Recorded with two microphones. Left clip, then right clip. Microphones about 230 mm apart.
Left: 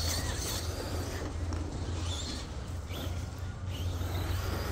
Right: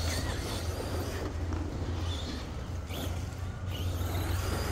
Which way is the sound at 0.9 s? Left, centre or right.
Right.